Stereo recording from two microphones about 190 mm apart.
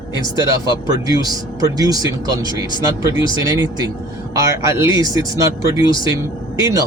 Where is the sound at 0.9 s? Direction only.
20° right (ahead or behind).